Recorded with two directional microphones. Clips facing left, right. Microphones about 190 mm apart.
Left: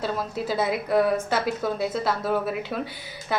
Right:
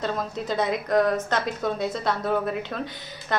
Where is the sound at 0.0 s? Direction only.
5° left (ahead or behind).